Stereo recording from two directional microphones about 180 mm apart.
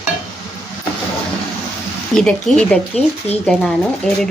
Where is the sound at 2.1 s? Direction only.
5° left (ahead or behind).